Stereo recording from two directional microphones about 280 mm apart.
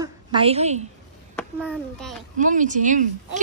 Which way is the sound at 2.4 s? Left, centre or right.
Right.